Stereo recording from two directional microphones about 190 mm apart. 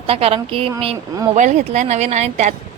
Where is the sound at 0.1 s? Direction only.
30° right (ahead or behind).